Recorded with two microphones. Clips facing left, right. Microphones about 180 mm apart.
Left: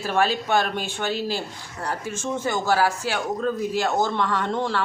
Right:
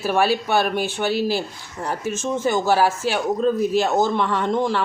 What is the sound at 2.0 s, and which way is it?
Speech, 15° left (ahead or behind).